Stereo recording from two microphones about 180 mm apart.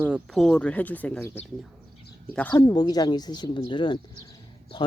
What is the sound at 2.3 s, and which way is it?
Speech, 10° left (ahead or behind).